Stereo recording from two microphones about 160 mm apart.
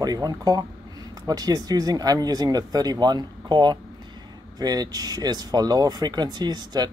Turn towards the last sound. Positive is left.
turn(degrees=-25)  # may be behind; listen again after turning